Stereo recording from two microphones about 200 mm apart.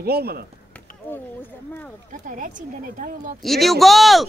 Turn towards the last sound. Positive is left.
turn(degrees=0)  # may be behind; listen again after turning